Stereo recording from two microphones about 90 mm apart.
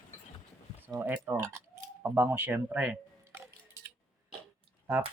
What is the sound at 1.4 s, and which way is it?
Keys jangling, 35° right (ahead or behind).